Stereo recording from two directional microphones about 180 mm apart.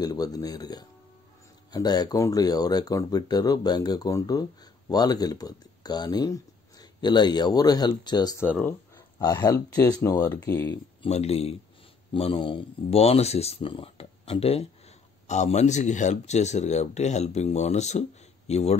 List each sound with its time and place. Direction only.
0.0 s speech: 20° left (ahead or behind)
11.1 s speech: 35° left (ahead or behind)